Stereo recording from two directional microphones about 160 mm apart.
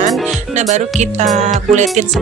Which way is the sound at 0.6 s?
45° right (ahead or behind).